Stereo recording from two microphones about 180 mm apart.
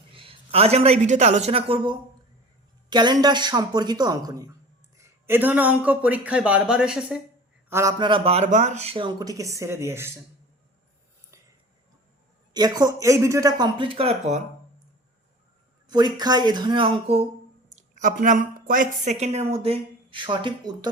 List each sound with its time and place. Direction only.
0.1 s a man's voice: 30° right (ahead or behind); by 7.2 s 5° right (ahead or behind)
7.7 s speech: 15° right (ahead or behind)
12.5 s speech: 20° right (ahead or behind); by 14.4 s 35° right (ahead or behind)
15.9 s speech: 25° right (ahead or behind)
17.7 s speech: 45° right (ahead or behind); by 20.9 s 25° right (ahead or behind)